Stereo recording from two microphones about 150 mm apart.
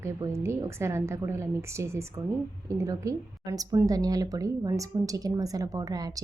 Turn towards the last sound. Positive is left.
turn(degrees=-25)  # may be behind; listen again after turning